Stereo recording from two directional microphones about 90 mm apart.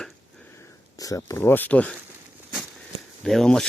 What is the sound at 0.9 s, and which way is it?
Speech, 40° left (ahead or behind).